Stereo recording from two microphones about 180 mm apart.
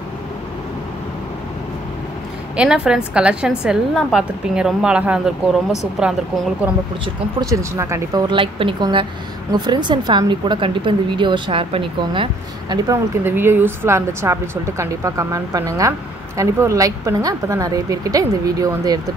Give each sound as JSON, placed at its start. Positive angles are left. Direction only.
{"t": 2.5, "sound": "a woman's voice", "side_deg": -5}
{"t": 7.3, "sound": "speech", "side_deg": -15}